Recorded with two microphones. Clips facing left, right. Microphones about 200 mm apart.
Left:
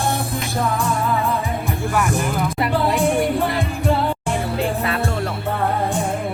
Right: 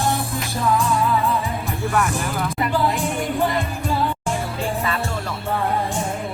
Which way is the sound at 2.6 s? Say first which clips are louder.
Left 3 dB; 65° left (ahead or behind).